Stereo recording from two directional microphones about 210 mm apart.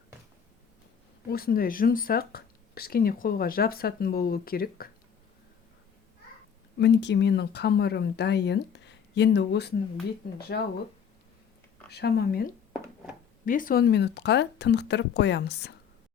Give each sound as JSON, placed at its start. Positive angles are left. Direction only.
{"t": 1.3, "sound": "speech", "side_deg": 45}
{"t": 6.7, "sound": "speech", "side_deg": 55}
{"t": 11.9, "sound": "speech", "side_deg": 50}